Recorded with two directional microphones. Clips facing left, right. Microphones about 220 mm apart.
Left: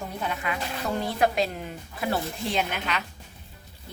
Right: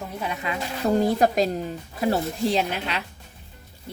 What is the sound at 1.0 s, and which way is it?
Speech, 40° right (ahead or behind).